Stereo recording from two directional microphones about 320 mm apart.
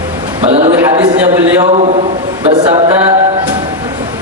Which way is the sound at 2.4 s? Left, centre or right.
Centre.